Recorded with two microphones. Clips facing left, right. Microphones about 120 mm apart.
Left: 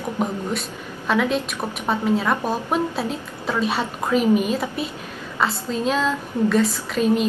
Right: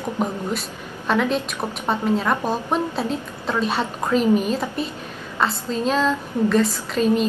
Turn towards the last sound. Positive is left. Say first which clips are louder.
# even
turn(degrees=5)  # may be behind; listen again after turning